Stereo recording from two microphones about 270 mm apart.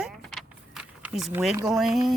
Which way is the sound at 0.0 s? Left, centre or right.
Centre.